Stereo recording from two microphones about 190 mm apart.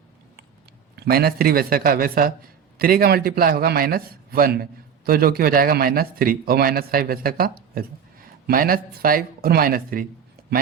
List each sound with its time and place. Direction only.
0.9 s a man's voice: 55° right (ahead or behind)